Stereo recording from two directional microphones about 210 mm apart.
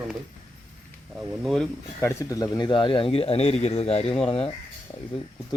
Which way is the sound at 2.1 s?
15° left (ahead or behind).